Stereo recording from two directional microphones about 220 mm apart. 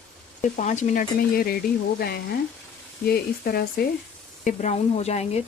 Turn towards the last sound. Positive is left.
turn(degrees=30)  # may be behind; listen again after turning